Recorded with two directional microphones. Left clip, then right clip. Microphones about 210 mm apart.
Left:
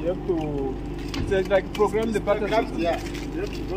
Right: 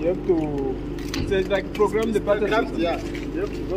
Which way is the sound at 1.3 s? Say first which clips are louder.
Left 1 dB; 5° left (ahead or behind).